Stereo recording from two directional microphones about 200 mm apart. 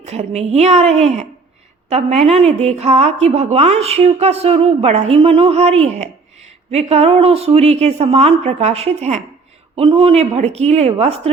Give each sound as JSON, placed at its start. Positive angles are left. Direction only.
{"t": 0.0, "sound": "a woman's voice", "side_deg": -35}